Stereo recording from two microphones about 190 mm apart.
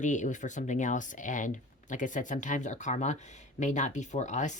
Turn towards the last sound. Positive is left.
turn(degrees=40)  # may be behind; listen again after turning